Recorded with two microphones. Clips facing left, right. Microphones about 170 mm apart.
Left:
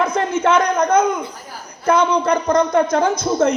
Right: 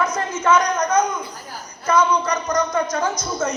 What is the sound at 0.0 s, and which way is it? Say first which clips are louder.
A man's voice: left 4 dB; 55° left (ahead or behind).